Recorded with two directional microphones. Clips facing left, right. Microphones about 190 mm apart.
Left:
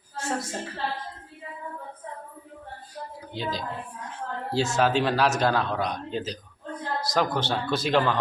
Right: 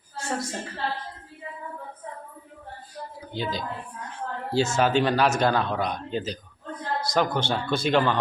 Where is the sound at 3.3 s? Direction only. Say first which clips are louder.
Right 1 dB; centre (ahead or behind).